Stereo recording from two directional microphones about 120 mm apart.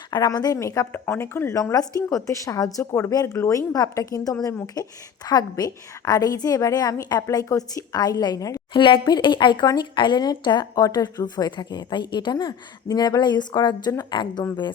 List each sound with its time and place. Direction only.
0.1 s a woman's voice: 35° left (ahead or behind)
8.7 s speech: 40° left (ahead or behind)